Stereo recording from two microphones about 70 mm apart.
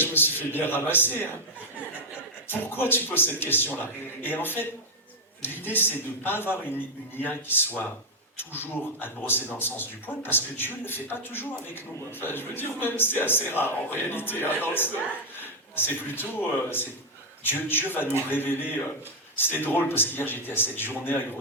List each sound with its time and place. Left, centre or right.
0.0 s a man's voice: left
2.5 s a man's voice: left